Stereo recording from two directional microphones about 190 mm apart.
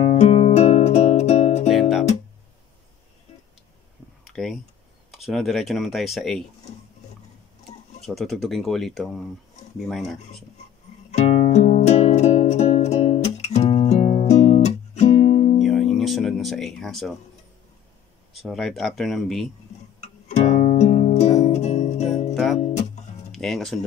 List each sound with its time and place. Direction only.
0.0 s music: 40° left (ahead or behind)
1.7 s guitar: centre (ahead or behind)
4.3 s a sound: centre (ahead or behind)
5.1 s speech: centre (ahead or behind)
8.0 s speech: centre (ahead or behind)
11.1 s music: 35° left (ahead or behind)
15.6 s music: centre (ahead or behind)
18.4 s speech: centre (ahead or behind)
20.0 s music: 35° left (ahead or behind)
22.3 s music: centre (ahead or behind)
22.6 s music: 35° left (ahead or behind)
23.3 s speech: centre (ahead or behind)